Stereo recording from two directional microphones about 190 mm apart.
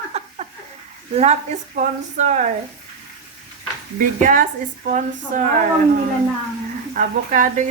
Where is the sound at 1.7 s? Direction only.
40° right (ahead or behind).